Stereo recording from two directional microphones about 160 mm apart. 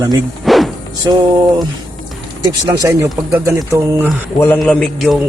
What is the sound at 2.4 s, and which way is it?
Speech, 20° right (ahead or behind).